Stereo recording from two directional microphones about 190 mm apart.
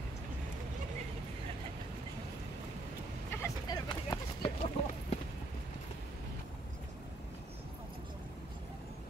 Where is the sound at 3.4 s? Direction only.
20° left (ahead or behind).